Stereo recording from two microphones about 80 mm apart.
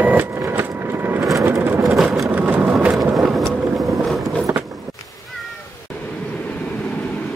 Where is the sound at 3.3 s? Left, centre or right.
Centre.